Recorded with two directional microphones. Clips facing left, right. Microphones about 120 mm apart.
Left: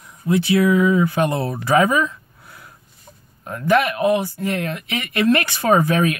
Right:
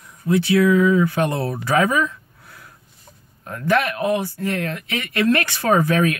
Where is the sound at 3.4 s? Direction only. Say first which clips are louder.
Left 2 dB; 15° left (ahead or behind).